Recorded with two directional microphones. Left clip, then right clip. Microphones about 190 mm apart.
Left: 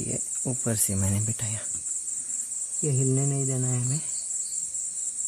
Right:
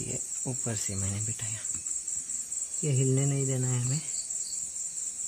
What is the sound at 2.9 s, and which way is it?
Speech, 45° left (ahead or behind).